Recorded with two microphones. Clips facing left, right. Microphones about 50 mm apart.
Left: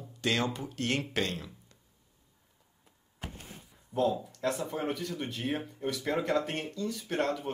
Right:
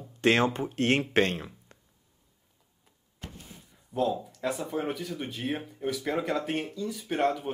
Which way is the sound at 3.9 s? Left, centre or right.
Centre.